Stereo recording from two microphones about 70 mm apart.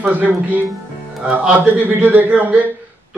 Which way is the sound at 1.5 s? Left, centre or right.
Right.